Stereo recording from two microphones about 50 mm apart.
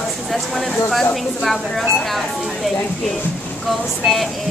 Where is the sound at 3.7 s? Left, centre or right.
Centre.